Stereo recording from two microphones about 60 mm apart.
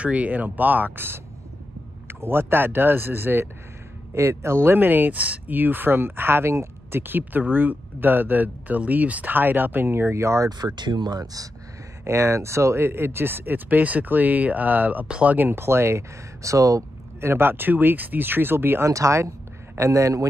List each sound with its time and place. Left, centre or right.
0.0 s speech: right
4.1 s speech: right
12.0 s speech: right
15.0 s speech: centre
15.3 s speech: right
16.4 s speech: right
17.2 s speech: right
18.9 s speech: right